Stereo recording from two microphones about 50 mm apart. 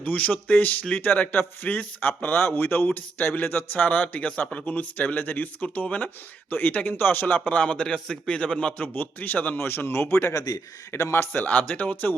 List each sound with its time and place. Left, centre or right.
0.0 s a man's voice: left
8.8 s speech: left
9.6 s a man's voice: left
11.3 s speech: left